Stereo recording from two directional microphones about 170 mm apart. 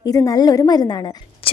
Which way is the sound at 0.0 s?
20° left (ahead or behind).